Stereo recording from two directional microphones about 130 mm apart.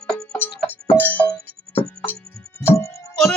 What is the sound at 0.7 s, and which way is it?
Music, 15° left (ahead or behind).